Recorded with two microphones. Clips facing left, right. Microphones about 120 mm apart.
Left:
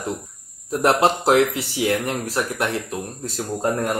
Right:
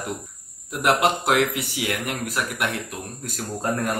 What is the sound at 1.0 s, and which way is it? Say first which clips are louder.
Speech: left 4 dB; 30° left (ahead or behind).